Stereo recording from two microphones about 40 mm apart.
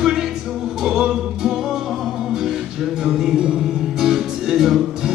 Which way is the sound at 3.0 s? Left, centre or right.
Centre.